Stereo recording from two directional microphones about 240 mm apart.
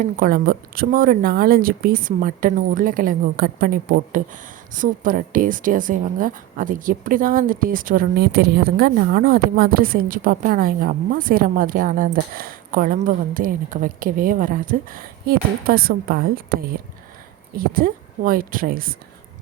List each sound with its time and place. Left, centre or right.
0.0 s a woman's voice: right